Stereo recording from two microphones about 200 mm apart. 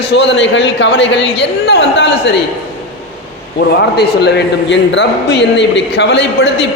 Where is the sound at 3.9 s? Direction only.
55° left (ahead or behind).